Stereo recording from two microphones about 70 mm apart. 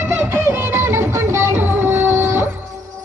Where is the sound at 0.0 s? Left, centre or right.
Right.